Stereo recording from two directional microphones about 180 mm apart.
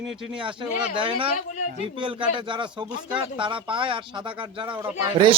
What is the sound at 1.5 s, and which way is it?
Speech, 45° left (ahead or behind).